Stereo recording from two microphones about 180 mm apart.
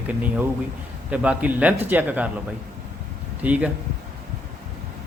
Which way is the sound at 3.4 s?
10° right (ahead or behind).